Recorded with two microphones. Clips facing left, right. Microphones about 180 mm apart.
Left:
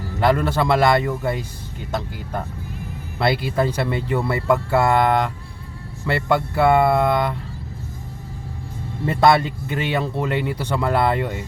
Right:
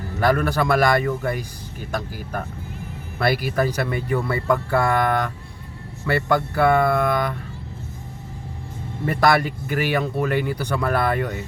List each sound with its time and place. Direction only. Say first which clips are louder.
0.2 s speech: left 1 dB; 25° left (ahead or behind)
9.0 s speech: left 2 dB; 25° left (ahead or behind)